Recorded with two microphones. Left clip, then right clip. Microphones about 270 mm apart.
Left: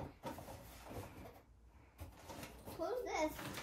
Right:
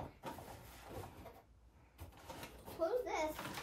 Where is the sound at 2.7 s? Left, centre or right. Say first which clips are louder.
Right 3 dB; centre.